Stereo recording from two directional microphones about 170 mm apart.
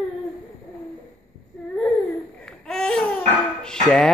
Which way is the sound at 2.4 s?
5° left (ahead or behind).